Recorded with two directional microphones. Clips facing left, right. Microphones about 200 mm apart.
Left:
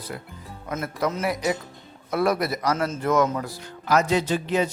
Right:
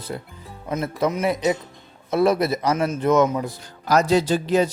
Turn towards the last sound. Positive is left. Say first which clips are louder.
# right 4 dB
turn(degrees=-35)  # may be behind; listen again after turning